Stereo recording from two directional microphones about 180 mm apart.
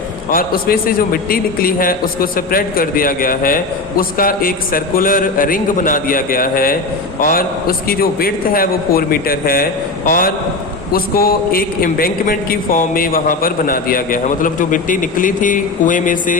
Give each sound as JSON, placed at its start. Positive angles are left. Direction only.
{"t": 0.3, "sound": "a man's voice", "side_deg": 55}